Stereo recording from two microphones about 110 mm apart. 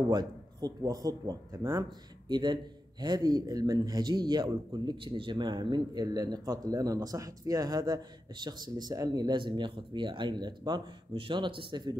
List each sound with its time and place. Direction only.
0.1 s a man's voice: 40° right (ahead or behind)
2.3 s a man's voice: 40° right (ahead or behind)